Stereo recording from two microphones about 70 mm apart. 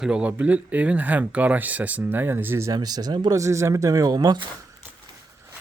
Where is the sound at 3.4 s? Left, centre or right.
Right.